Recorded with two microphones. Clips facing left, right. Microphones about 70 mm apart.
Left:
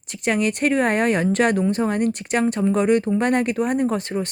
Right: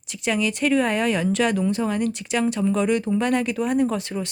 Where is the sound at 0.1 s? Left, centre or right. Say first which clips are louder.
Left 2 dB; left.